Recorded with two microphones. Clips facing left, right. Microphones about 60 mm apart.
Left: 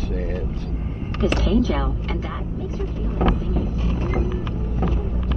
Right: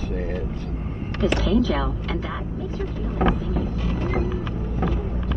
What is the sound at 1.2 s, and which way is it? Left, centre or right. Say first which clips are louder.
Speech: even; left.